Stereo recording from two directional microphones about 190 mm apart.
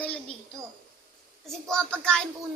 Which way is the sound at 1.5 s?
5° left (ahead or behind).